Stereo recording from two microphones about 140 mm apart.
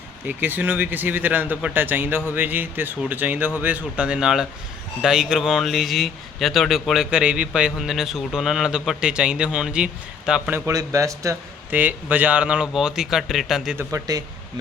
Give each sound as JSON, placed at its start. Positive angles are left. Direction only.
{"t": 0.3, "sound": "speech", "side_deg": -15}
{"t": 10.7, "sound": "speech", "side_deg": -25}
{"t": 11.8, "sound": "speech", "side_deg": -10}
{"t": 13.7, "sound": "speech", "side_deg": -25}